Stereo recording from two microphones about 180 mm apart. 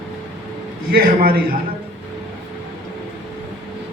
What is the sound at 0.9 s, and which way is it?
Speech, 55° right (ahead or behind).